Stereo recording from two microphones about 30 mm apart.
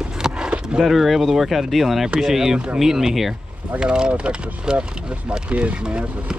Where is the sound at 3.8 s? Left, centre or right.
Right.